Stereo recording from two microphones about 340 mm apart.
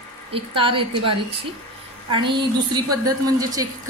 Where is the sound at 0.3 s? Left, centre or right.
Centre.